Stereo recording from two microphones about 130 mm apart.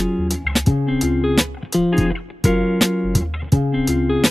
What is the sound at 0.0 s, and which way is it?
Music, centre (ahead or behind).